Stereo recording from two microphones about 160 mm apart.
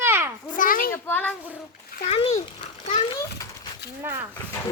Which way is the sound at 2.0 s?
40° left (ahead or behind).